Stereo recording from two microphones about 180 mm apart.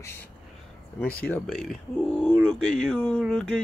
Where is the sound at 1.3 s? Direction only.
Centre (ahead or behind).